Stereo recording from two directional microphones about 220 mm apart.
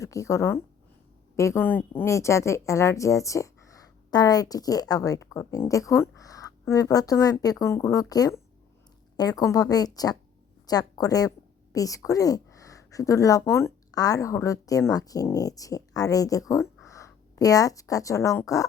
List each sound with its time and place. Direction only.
0.0 s a woman's voice: 15° left (ahead or behind)